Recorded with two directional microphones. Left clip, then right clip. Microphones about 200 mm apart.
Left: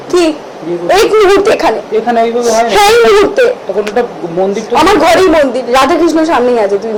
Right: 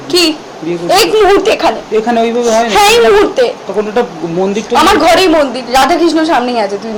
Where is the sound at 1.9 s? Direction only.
40° right (ahead or behind).